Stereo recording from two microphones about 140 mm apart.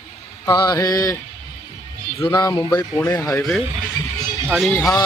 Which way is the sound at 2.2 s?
30° left (ahead or behind).